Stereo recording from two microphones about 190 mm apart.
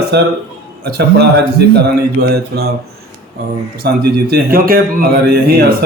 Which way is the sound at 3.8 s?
60° right (ahead or behind).